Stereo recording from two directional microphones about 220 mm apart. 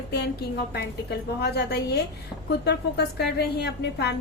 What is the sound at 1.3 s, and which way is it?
A woman's voice, 50° left (ahead or behind).